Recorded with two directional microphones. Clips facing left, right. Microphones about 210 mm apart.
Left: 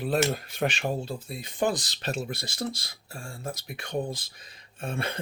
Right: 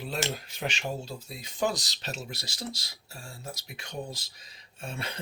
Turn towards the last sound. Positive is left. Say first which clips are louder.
# left 6 dB
turn(degrees=55)  # may be behind; listen again after turning